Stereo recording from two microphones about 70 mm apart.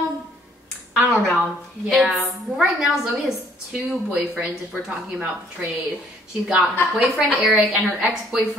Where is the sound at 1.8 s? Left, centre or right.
Centre.